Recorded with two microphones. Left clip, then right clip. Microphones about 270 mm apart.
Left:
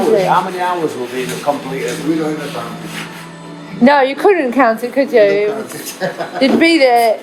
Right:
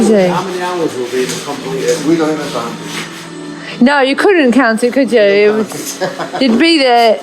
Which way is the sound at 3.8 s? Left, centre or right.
Right.